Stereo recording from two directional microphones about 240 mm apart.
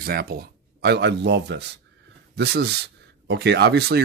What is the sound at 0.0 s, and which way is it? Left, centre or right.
Speech, right.